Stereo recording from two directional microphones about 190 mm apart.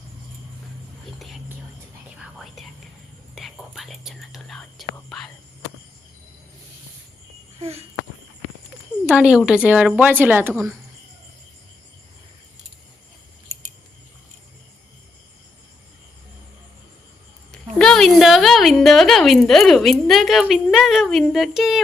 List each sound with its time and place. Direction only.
3.3 s speech: centre (ahead or behind)
7.6 s speech: 35° right (ahead or behind)
9.0 s speech: 5° right (ahead or behind)
17.5 s speech: 5° left (ahead or behind)